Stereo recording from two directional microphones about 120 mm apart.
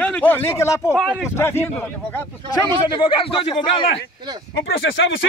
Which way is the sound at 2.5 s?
45° left (ahead or behind).